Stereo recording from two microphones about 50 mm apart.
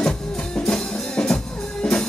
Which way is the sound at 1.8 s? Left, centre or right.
Centre.